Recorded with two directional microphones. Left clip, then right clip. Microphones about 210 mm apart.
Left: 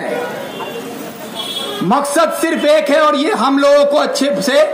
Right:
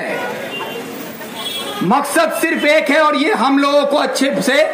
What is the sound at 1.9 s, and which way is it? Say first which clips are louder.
A man's voice: left 1 dB; 50° left (ahead or behind).